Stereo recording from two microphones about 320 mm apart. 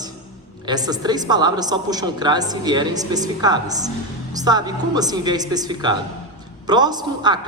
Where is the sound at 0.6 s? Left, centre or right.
Centre.